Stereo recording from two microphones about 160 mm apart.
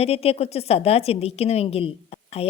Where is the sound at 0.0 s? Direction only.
40° left (ahead or behind).